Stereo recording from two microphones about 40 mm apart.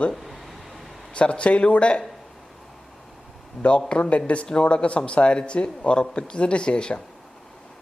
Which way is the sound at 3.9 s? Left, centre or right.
Left.